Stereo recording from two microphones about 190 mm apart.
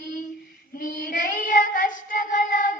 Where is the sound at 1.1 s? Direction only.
45° left (ahead or behind).